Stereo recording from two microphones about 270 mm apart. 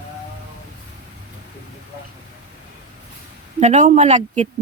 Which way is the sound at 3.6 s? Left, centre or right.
Right.